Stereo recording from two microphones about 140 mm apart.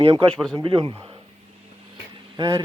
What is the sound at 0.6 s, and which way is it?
Speech, 35° right (ahead or behind).